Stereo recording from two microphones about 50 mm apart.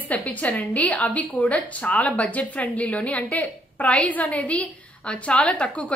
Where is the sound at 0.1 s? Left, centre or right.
Left.